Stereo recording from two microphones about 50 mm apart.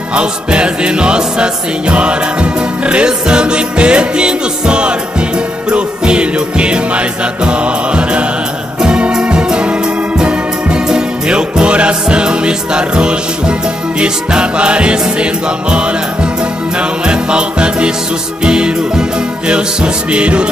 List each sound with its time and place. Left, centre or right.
0.1 s music: right